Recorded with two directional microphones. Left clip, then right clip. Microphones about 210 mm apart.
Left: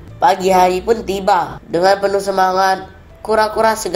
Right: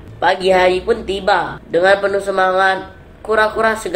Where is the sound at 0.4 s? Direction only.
25° left (ahead or behind).